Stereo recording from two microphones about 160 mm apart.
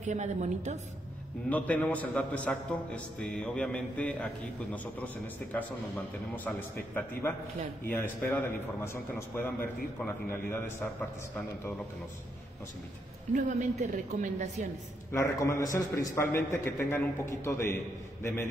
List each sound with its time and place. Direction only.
0.0 s a woman's voice: 45° right (ahead or behind)
1.5 s a man's voice: 10° left (ahead or behind)
13.3 s a woman's voice: 50° right (ahead or behind)
15.1 s a man's voice: 20° left (ahead or behind)